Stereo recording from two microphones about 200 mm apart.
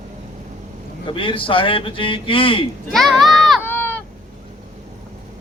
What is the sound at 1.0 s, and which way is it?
A man's voice, 25° left (ahead or behind).